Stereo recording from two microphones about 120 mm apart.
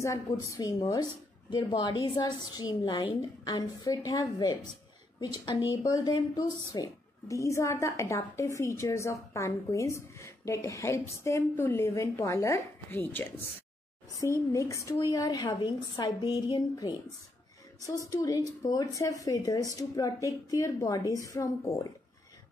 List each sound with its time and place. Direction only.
0.0 s a woman's voice: 25° left (ahead or behind)
18.1 s a woman's voice: 30° left (ahead or behind)